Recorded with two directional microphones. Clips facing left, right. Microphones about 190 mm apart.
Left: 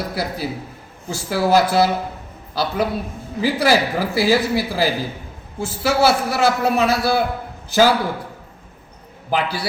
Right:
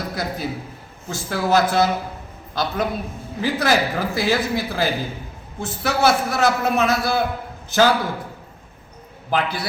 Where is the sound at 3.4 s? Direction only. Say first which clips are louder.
Left 3 dB; 10° left (ahead or behind).